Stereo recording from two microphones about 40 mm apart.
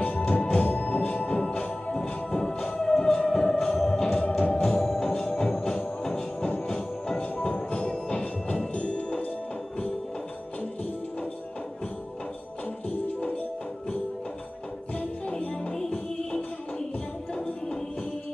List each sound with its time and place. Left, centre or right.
0.0 s music: left
0.3 s music: left
0.7 s music: left
2.0 s music: centre
4.1 s music: left; by 5.1 s centre
5.1 s music: left
7.2 s music: left
15.3 s music: left